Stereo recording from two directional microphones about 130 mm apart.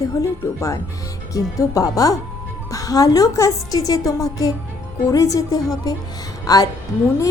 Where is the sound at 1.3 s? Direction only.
25° left (ahead or behind).